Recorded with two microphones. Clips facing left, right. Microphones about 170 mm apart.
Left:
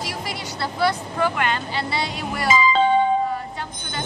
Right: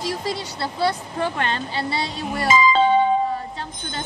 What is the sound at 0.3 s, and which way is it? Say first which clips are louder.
Speech: right 2 dB; 30° right (ahead or behind).